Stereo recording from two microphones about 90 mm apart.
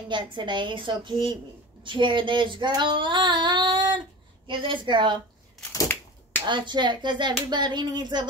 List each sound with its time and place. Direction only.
0.1 s a woman's voice: 60° right (ahead or behind)
2.8 s child singing: 60° right (ahead or behind)
4.5 s a woman's voice: 65° right (ahead or behind)
6.4 s a woman's voice: 60° right (ahead or behind)
7.4 s a sound: 55° right (ahead or behind)